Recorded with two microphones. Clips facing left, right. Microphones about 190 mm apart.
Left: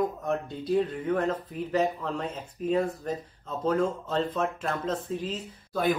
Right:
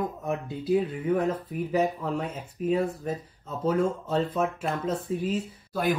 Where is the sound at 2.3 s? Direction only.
Centre (ahead or behind).